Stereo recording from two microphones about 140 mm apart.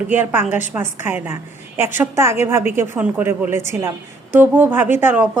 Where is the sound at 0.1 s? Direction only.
15° right (ahead or behind).